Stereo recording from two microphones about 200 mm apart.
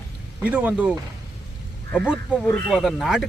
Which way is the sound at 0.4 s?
5° right (ahead or behind).